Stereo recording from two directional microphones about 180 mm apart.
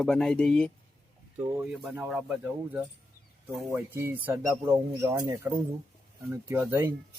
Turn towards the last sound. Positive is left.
turn(degrees=-10)  # may be behind; listen again after turning